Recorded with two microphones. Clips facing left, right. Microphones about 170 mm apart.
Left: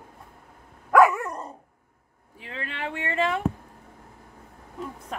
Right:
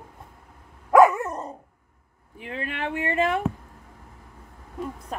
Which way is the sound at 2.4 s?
20° right (ahead or behind).